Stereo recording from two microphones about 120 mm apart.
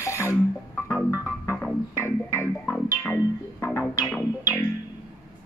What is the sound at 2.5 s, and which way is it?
Music, 10° left (ahead or behind).